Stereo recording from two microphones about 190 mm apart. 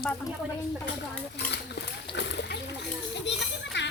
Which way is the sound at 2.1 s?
65° left (ahead or behind).